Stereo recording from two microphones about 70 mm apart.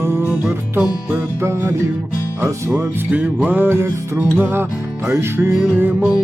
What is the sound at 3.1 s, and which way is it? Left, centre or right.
Music, right.